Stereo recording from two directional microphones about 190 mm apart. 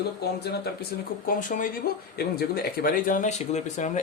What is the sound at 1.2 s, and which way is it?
Speech, 45° left (ahead or behind).